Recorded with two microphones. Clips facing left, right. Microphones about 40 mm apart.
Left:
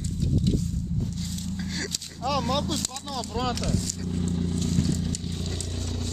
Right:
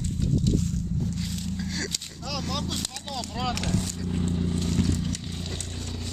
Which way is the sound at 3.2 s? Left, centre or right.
Centre.